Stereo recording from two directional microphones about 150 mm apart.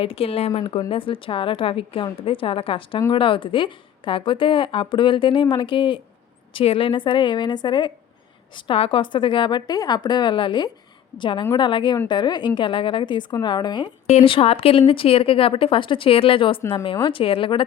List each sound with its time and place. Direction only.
0.0 s a woman's voice: 40° left (ahead or behind)
14.1 s a woman's voice: 40° left (ahead or behind)